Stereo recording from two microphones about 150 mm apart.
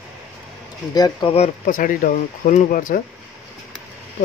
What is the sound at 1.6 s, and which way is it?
Speech, 65° left (ahead or behind).